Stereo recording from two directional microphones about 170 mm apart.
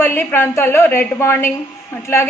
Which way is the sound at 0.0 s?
15° left (ahead or behind).